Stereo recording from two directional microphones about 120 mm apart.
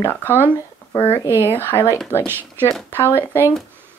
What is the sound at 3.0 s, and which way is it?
Speech, 20° left (ahead or behind).